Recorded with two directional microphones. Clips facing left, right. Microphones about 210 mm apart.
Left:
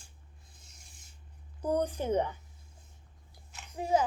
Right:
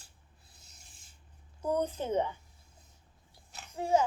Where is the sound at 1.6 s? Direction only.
10° left (ahead or behind).